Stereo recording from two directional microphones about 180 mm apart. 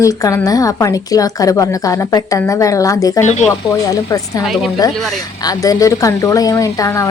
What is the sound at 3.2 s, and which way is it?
Speech, 40° left (ahead or behind).